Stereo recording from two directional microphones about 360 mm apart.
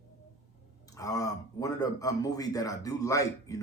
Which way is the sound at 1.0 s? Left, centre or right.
Centre.